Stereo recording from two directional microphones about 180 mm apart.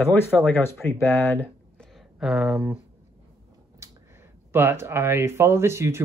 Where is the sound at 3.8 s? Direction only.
15° right (ahead or behind).